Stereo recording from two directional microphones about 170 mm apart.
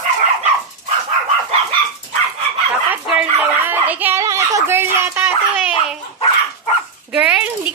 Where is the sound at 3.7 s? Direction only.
10° right (ahead or behind).